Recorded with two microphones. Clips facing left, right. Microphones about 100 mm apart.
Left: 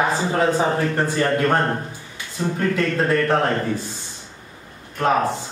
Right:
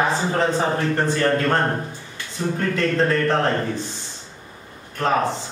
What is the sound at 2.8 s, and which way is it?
Speech, 10° left (ahead or behind).